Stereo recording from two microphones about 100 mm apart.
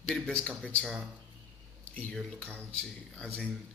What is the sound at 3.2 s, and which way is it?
Speech, 10° left (ahead or behind).